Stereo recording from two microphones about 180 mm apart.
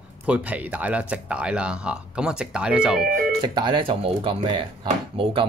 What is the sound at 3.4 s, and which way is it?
Speech, 25° right (ahead or behind).